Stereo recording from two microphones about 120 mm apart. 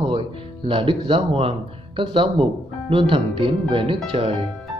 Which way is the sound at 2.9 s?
45° right (ahead or behind).